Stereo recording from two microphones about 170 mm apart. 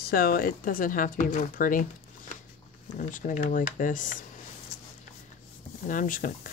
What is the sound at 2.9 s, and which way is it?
Speech, 50° left (ahead or behind).